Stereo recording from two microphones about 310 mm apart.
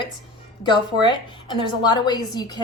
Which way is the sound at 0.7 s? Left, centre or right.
Centre.